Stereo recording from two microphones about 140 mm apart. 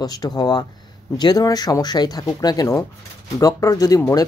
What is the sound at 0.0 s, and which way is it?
Speech, 25° left (ahead or behind).